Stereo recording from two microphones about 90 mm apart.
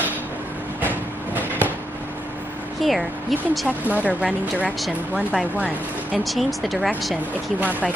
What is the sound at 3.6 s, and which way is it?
Speech, 15° right (ahead or behind).